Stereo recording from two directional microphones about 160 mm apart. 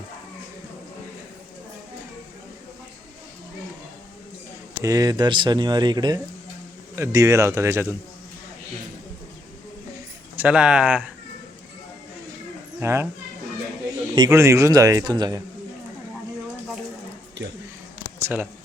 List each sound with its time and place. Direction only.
4.8 s speech: 20° right (ahead or behind)
10.3 s speech: 10° right (ahead or behind)
12.8 s speech: 15° right (ahead or behind)
14.3 s speech: 20° right (ahead or behind)
18.2 s a sound: 15° right (ahead or behind)